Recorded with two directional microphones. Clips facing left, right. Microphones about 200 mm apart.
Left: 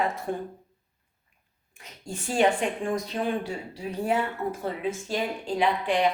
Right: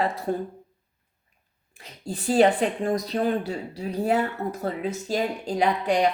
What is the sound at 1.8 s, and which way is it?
Speech, 35° right (ahead or behind).